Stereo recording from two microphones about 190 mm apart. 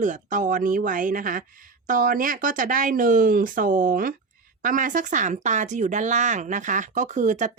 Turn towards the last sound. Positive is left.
turn(degrees=-40)  # may be behind; listen again after turning